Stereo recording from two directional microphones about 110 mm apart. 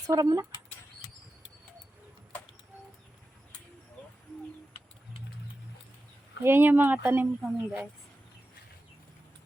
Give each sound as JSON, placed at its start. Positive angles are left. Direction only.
{"t": 0.1, "sound": "speech", "side_deg": -35}
{"t": 6.4, "sound": "speech", "side_deg": -20}
{"t": 7.4, "sound": "speech", "side_deg": -5}